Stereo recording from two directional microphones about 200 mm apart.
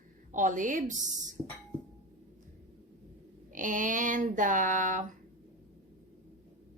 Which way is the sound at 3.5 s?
40° right (ahead or behind).